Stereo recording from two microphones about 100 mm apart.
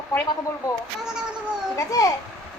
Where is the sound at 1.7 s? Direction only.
35° left (ahead or behind).